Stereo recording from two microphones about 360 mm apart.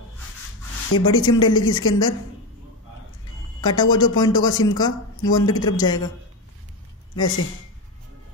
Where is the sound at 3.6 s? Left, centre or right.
Centre.